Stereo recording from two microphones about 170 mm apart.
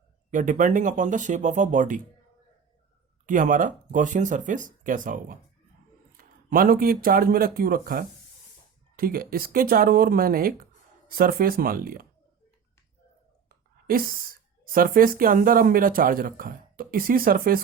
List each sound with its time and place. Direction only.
0.3 s speech: 50° right (ahead or behind)
3.2 s speech: 50° right (ahead or behind)
13.5 s whispering: 60° right (ahead or behind)
14.6 s speech: 55° right (ahead or behind)